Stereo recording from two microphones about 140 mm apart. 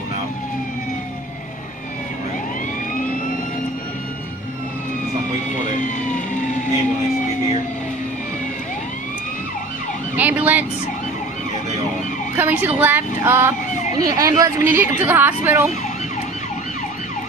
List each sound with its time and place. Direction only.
5.8 s vehicle: 65° left (ahead or behind)
10.1 s ambulance: 10° right (ahead or behind)
12.4 s speech: 15° right (ahead or behind)
14.6 s speech: 15° right (ahead or behind)